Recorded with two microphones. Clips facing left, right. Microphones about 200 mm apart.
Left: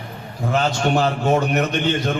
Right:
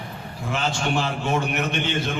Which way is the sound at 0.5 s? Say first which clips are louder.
Left 5 dB; 40° left (ahead or behind).